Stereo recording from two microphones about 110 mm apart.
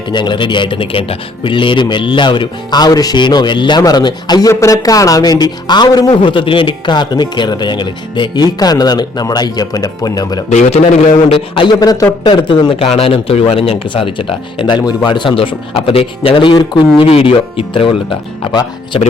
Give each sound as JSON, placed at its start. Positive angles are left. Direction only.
{"t": 0.1, "sound": "speech", "side_deg": 45}
{"t": 10.5, "sound": "a man's voice", "side_deg": 85}
{"t": 11.5, "sound": "speech", "side_deg": 50}
{"t": 11.8, "sound": "speech", "side_deg": 35}
{"t": 12.2, "sound": "speech", "side_deg": 45}
{"t": 12.9, "sound": "speech", "side_deg": 60}
{"t": 18.9, "sound": "speech", "side_deg": 60}